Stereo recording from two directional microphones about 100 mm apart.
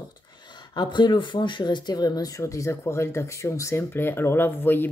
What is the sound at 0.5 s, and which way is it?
Speech, 50° left (ahead or behind).